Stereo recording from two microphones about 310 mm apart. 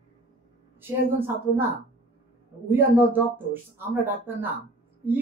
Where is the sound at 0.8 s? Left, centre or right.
Centre.